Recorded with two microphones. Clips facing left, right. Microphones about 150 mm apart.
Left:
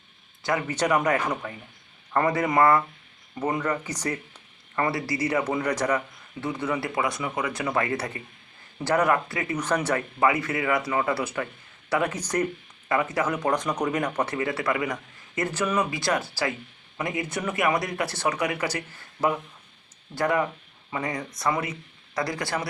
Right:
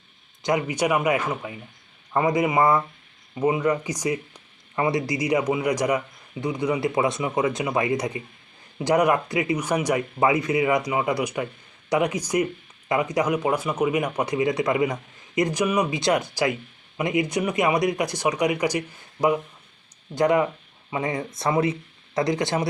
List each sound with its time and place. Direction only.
0.4 s speech: 15° right (ahead or behind)
20.1 s speech: 20° right (ahead or behind)